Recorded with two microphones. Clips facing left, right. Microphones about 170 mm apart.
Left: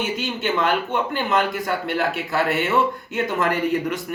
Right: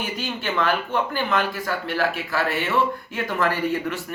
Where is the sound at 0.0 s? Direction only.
20° left (ahead or behind).